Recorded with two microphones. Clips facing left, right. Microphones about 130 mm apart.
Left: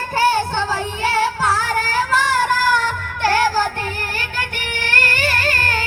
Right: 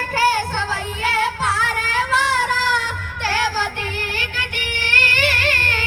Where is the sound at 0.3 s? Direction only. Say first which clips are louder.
Left 3 dB; 25° left (ahead or behind); by 3.7 s 45° left (ahead or behind).